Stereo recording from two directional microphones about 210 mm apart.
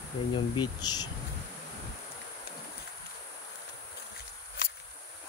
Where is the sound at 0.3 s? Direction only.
20° left (ahead or behind).